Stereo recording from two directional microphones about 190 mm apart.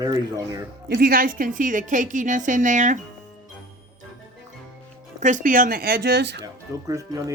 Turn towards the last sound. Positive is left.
turn(degrees=-20)  # may be behind; listen again after turning